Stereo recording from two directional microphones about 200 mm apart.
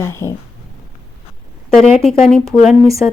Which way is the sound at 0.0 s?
15° left (ahead or behind).